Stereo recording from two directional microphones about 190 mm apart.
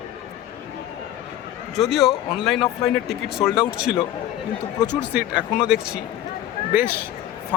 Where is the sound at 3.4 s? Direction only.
25° left (ahead or behind).